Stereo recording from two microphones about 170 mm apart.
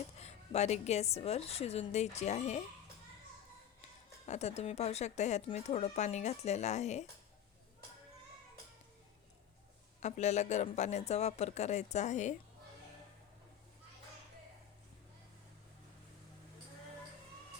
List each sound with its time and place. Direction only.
0.2 s speech: 40° left (ahead or behind)
4.3 s speech: 40° left (ahead or behind)
10.0 s a man's voice: 45° left (ahead or behind)